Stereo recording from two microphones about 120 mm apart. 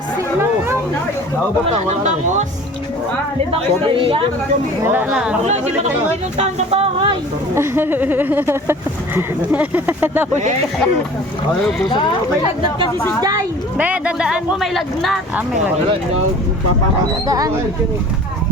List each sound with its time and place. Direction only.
1.9 s speech: 75° right (ahead or behind)
3.5 s speech: 45° right (ahead or behind)
4.8 s speech: 20° right (ahead or behind)
5.5 s speech: 70° right (ahead or behind)
6.3 s music: 60° right (ahead or behind)
7.5 s speech: 20° right (ahead or behind)
11.9 s speech: 40° left (ahead or behind)
13.0 s a woman's voice: 20° left (ahead or behind)
13.7 s speech: 10° right (ahead or behind)
17.2 s speech: 30° right (ahead or behind)